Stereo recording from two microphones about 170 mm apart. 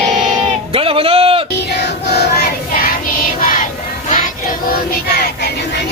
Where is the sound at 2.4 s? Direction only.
60° left (ahead or behind).